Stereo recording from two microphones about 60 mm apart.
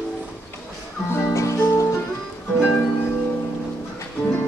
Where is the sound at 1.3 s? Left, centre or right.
Left.